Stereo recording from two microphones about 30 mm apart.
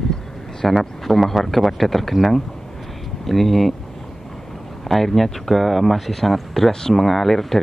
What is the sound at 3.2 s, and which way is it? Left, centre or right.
Speech, centre.